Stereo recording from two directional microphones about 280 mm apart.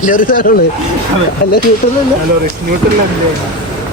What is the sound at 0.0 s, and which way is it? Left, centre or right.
Speech, left.